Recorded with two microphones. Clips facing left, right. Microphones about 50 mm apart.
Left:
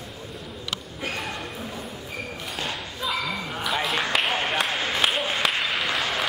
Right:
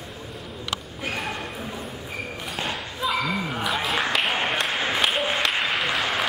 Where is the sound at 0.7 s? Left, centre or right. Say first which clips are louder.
Right 1 dB; centre.